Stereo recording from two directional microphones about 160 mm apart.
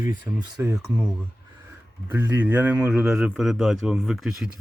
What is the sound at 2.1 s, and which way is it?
A man's voice, 10° right (ahead or behind).